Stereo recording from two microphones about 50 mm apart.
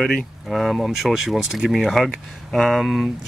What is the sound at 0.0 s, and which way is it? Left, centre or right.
Speech, centre.